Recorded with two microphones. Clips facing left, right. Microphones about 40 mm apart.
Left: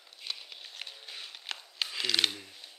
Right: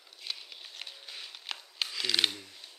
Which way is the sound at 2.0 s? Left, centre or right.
Centre.